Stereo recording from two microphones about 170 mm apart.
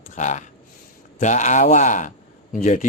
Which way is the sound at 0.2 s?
45° left (ahead or behind).